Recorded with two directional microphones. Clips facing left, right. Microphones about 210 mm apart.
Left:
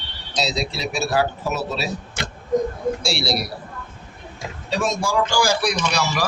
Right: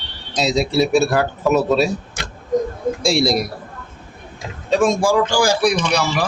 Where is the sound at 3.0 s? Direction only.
50° right (ahead or behind).